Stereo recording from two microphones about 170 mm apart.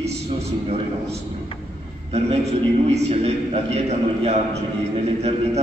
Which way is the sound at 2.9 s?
40° right (ahead or behind).